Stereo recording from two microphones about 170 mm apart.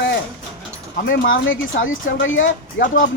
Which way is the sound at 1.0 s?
90° left.